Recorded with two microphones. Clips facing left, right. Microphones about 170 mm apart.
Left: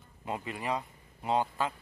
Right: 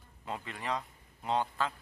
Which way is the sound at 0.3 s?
10° left (ahead or behind).